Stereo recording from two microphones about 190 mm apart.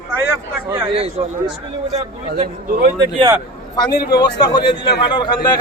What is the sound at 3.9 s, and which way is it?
Speech, 55° left (ahead or behind).